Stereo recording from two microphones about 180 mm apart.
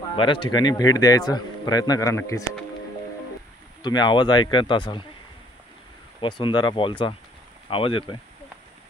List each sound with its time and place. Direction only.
0.1 s a man's voice: 25° left (ahead or behind)
3.8 s a man's voice: 25° left (ahead or behind)
6.2 s a man's voice: 25° left (ahead or behind)